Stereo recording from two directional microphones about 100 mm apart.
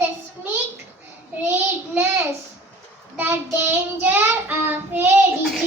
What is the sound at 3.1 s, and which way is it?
Child singing, 20° right (ahead or behind).